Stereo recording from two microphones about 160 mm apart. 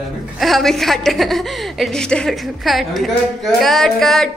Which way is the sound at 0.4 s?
Centre (ahead or behind).